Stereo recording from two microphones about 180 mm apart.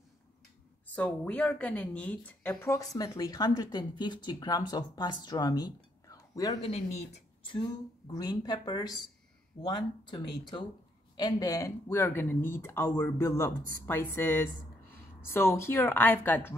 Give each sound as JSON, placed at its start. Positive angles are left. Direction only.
{"t": 0.8, "sound": "speech", "side_deg": 10}
{"t": 6.6, "sound": "speech", "side_deg": 35}
{"t": 8.1, "sound": "speech", "side_deg": 20}